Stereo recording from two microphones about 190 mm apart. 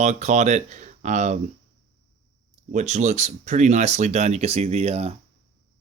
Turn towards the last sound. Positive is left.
turn(degrees=-35)  # may be behind; listen again after turning